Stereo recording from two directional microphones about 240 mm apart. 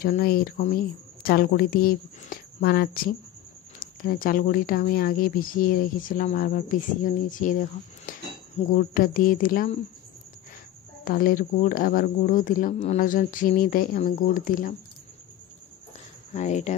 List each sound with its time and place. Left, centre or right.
0.0 s speech: left
11.1 s speech: left
16.3 s speech: left